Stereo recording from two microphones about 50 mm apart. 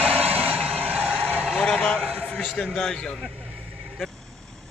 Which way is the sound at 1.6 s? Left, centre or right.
Centre.